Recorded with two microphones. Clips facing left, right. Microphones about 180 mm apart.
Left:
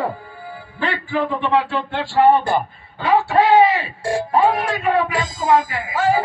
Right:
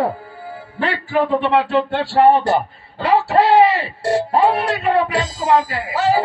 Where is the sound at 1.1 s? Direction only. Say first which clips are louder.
Right 3 dB; 65° right (ahead or behind).